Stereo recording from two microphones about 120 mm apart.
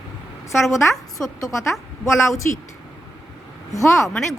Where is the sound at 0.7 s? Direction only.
Centre (ahead or behind).